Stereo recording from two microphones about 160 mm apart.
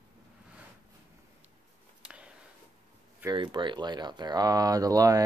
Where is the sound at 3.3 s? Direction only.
30° right (ahead or behind).